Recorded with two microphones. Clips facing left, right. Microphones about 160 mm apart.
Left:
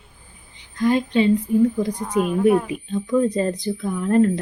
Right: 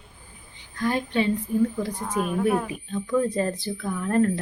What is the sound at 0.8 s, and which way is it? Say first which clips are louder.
Speech: left 6 dB; 20° left (ahead or behind).